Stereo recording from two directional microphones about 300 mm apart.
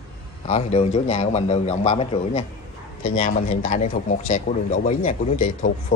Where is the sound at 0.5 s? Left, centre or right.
Left.